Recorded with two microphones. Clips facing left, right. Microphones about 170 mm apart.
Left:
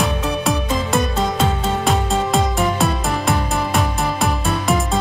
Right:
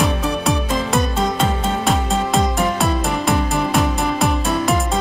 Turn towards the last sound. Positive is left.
turn(degrees=0)  # may be behind; listen again after turning